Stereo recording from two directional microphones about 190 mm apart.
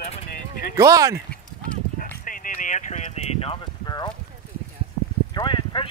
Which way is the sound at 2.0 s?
45° left (ahead or behind).